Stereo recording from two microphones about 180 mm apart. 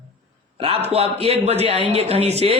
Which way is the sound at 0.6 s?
35° right (ahead or behind).